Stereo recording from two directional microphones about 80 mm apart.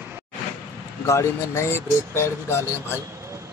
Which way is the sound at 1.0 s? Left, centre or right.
Left.